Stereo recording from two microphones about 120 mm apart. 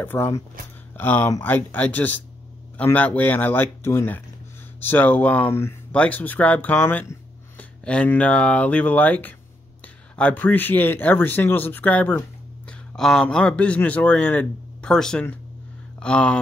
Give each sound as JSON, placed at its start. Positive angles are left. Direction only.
{"t": 0.0, "sound": "speech", "side_deg": 20}
{"t": 12.9, "sound": "speech", "side_deg": 5}